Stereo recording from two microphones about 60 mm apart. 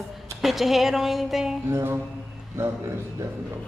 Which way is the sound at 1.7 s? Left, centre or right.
Right.